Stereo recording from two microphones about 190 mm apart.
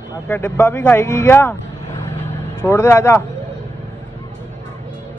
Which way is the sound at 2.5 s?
15° left (ahead or behind).